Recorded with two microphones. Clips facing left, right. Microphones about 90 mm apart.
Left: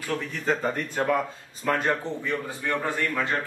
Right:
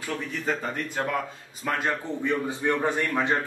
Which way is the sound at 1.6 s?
5° right (ahead or behind).